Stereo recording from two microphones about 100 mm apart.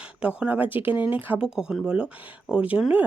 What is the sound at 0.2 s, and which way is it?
Speech, 15° right (ahead or behind).